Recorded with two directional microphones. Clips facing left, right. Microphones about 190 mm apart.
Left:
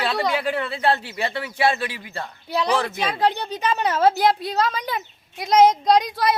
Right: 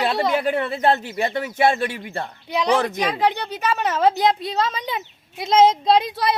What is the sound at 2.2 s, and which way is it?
A woman's voice, 15° right (ahead or behind).